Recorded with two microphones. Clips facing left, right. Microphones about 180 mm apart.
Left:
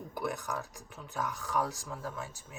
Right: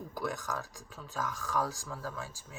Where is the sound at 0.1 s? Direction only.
20° left (ahead or behind).